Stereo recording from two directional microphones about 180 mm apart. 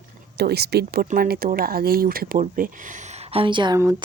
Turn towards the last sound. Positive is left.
turn(degrees=-20)  # may be behind; listen again after turning